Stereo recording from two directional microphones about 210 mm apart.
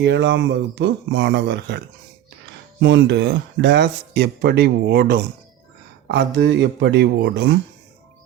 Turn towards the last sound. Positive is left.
turn(degrees=-55)  # may be behind; listen again after turning